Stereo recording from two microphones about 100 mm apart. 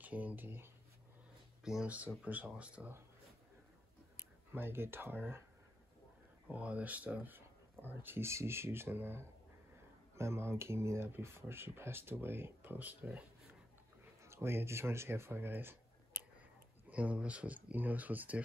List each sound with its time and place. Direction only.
0.0 s speech: 15° right (ahead or behind)
1.6 s speech: 5° right (ahead or behind)
4.5 s speech: 20° right (ahead or behind)
6.4 s speech: 15° right (ahead or behind)
14.2 s speech: 25° right (ahead or behind)
16.9 s speech: 15° right (ahead or behind)